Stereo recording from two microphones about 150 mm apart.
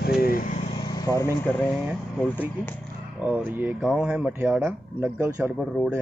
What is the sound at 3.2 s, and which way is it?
Speech, 10° right (ahead or behind).